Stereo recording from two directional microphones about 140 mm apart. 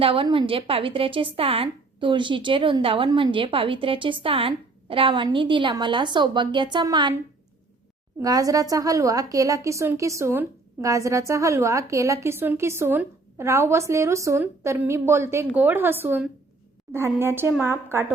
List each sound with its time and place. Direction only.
0.0 s a woman's voice: 40° right (ahead or behind)
8.2 s a woman's voice: 25° right (ahead or behind)